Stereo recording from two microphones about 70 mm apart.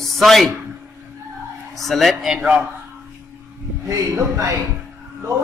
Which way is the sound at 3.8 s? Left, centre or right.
Right.